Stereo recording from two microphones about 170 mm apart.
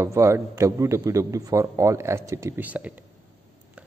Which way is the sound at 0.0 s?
15° right (ahead or behind).